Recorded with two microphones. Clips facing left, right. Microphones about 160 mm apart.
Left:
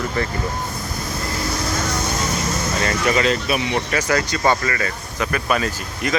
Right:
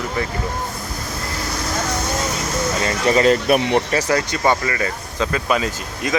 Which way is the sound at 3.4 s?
50° right (ahead or behind).